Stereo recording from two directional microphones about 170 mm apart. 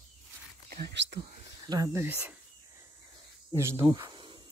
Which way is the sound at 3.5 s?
15° right (ahead or behind).